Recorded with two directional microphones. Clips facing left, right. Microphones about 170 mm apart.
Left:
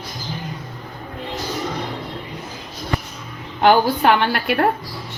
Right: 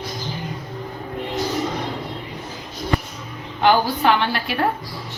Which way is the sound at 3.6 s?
55° left (ahead or behind).